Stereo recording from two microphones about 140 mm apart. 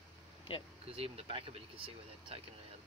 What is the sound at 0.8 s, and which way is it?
Speech, 45° right (ahead or behind).